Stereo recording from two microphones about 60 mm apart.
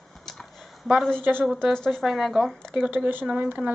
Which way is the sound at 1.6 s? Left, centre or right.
Centre.